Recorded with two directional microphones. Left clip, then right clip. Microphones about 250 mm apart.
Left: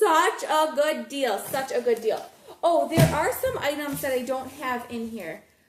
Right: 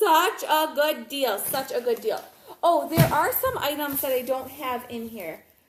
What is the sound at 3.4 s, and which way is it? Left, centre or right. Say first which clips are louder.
A woman's voice: right 1 dB; centre.